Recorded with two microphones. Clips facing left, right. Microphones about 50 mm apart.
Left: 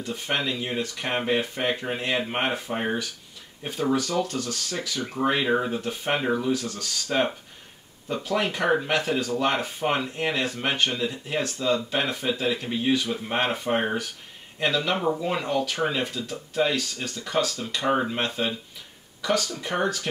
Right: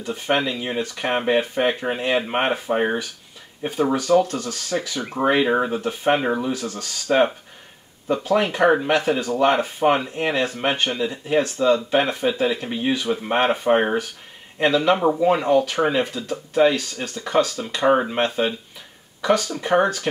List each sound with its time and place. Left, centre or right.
0.0 s speech: right
6.6 s speech: right
8.2 s speech: right